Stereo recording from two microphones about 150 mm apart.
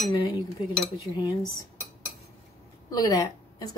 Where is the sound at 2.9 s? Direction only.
25° left (ahead or behind).